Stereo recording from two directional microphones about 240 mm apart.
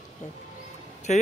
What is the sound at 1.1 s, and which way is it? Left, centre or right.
Speech, left.